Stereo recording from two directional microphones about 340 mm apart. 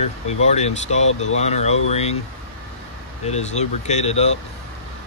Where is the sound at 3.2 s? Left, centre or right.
Centre.